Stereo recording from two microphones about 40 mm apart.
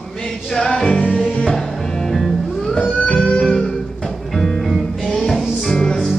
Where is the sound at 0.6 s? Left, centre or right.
Centre.